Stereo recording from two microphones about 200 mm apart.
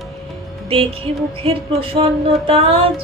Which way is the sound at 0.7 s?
30° right (ahead or behind).